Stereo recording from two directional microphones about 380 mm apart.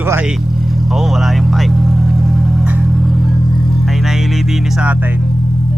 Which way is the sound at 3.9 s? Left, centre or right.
Centre.